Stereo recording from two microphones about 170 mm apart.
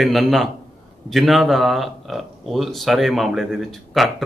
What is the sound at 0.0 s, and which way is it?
Speech, centre (ahead or behind).